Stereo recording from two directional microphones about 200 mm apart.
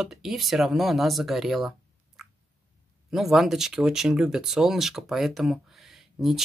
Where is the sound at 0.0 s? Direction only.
Centre (ahead or behind).